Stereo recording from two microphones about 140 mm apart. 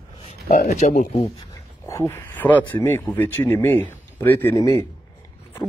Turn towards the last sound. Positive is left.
turn(degrees=25)  # may be behind; listen again after turning